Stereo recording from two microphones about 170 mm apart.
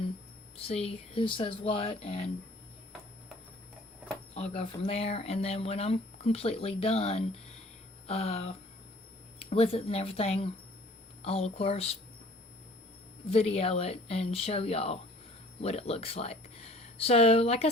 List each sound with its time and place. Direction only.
0.5 s speech: 35° left (ahead or behind)
4.4 s speech: 35° left (ahead or behind)
13.3 s speech: 35° left (ahead or behind)